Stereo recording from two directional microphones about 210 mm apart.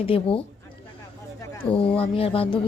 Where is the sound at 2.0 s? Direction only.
25° left (ahead or behind).